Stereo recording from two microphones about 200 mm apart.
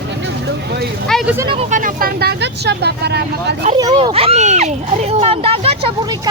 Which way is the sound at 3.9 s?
30° right (ahead or behind).